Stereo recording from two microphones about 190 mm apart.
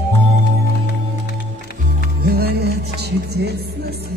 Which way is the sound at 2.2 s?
55° right (ahead or behind).